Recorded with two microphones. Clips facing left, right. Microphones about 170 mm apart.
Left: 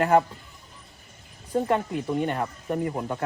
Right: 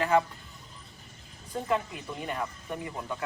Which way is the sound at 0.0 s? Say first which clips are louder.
Left 5 dB; 45° left (ahead or behind).